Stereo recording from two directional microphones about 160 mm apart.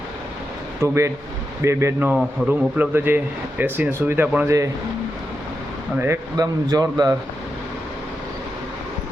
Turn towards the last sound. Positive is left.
turn(degrees=-20)  # may be behind; listen again after turning